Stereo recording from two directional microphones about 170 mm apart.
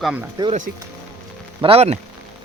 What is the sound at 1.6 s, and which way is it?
Speech, 35° right (ahead or behind).